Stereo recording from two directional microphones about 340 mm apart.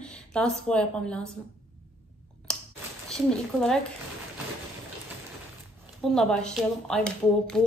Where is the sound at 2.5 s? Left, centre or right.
Centre.